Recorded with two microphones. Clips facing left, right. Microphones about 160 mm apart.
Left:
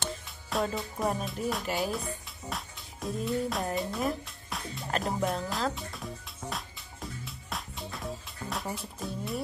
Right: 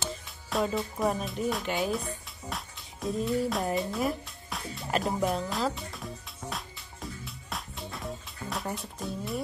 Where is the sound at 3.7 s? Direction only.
Centre (ahead or behind).